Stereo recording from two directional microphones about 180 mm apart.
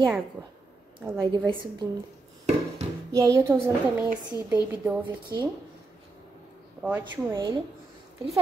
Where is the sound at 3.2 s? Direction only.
15° right (ahead or behind).